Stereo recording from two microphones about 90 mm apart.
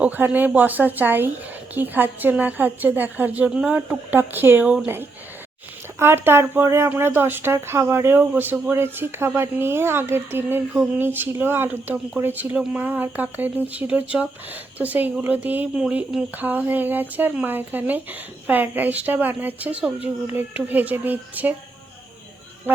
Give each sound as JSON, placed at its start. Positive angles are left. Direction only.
{"t": 0.0, "sound": "speech", "side_deg": -15}
{"t": 6.0, "sound": "speech", "side_deg": -25}